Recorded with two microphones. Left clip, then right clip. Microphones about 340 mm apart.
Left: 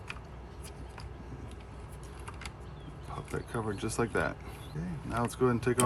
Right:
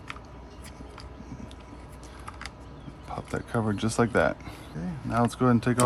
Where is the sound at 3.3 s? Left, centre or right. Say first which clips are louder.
Right 6 dB; right.